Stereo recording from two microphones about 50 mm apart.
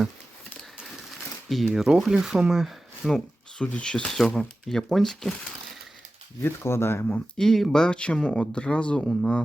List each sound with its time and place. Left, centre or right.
1.5 s speech: centre
2.5 s a sound: centre
3.6 s speech: left; by 5.3 s centre
6.4 s speech: left
7.3 s speech: centre